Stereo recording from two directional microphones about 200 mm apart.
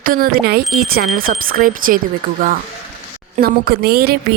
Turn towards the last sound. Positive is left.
turn(degrees=-50)  # may be behind; listen again after turning